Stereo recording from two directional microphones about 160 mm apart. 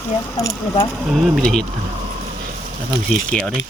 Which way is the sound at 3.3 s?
5° left (ahead or behind).